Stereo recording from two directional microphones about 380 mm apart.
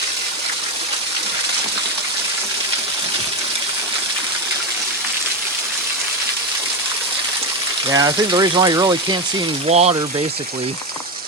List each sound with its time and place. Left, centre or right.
7.9 s speech: centre